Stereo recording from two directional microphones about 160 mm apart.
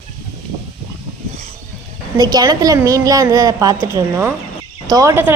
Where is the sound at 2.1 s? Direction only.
25° right (ahead or behind).